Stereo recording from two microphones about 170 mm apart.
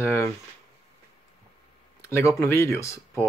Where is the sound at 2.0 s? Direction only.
15° left (ahead or behind).